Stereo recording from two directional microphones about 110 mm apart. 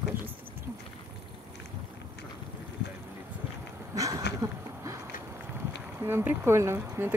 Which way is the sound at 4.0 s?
30° right (ahead or behind).